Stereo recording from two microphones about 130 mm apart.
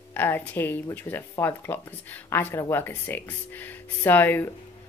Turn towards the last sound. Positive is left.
turn(degrees=15)  # may be behind; listen again after turning